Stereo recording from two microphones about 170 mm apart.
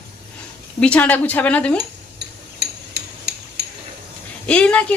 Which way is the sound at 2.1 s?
70° right (ahead or behind).